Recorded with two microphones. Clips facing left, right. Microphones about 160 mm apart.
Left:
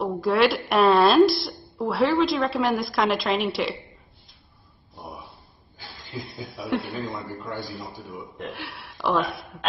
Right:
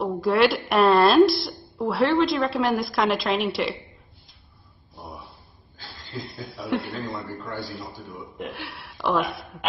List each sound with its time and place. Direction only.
0.0 s a woman's voice: centre (ahead or behind)
5.8 s chuckle: 10° left (ahead or behind)
6.7 s a woman's voice: centre (ahead or behind)
7.4 s a man's voice: 20° left (ahead or behind)
7.8 s a woman's voice: centre (ahead or behind)